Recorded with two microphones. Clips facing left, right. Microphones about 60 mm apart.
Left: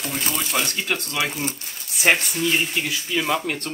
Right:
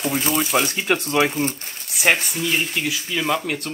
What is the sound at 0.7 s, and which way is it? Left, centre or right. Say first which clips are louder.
Speech: right 6 dB; right.